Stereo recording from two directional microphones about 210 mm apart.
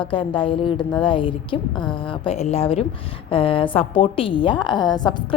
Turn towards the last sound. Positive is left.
turn(degrees=20)  # may be behind; listen again after turning